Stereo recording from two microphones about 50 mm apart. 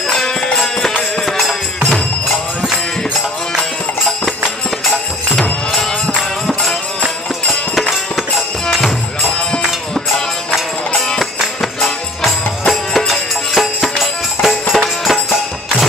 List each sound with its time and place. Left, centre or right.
0.1 s music: centre
7.7 s music: centre
9.9 s music: centre